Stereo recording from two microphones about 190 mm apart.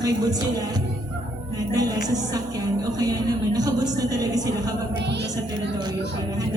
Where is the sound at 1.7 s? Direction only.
20° right (ahead or behind).